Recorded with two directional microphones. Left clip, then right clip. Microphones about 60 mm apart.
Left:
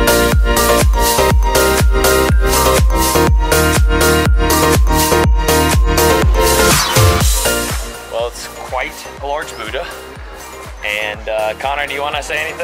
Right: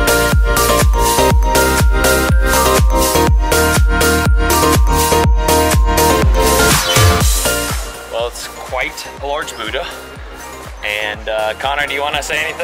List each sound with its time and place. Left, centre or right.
0.0 s music: centre
8.7 s music: right
9.4 s music: centre